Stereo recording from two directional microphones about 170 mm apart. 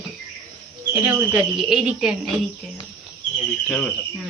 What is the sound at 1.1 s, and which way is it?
A woman's voice, 10° right (ahead or behind).